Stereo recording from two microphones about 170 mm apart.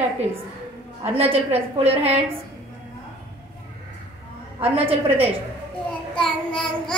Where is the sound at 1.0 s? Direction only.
35° right (ahead or behind).